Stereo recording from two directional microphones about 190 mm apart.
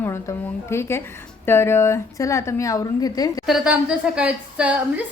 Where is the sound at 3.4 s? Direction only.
5° right (ahead or behind).